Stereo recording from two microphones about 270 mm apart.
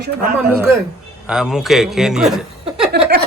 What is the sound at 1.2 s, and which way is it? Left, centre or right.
A man's voice, centre.